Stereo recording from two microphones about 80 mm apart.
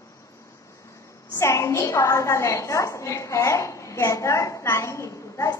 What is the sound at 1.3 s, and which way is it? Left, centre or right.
A woman's voice, left.